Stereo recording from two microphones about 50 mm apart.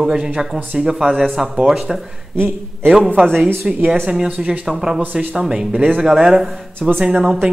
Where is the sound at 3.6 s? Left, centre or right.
Centre.